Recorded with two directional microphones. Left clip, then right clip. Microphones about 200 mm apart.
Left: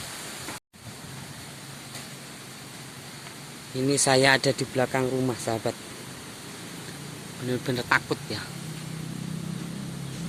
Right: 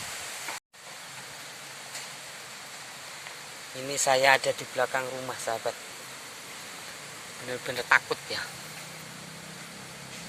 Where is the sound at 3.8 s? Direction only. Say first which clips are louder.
Left 2 dB; 10° left (ahead or behind).